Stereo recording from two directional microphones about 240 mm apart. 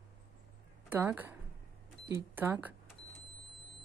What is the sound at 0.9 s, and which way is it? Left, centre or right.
Speech, centre.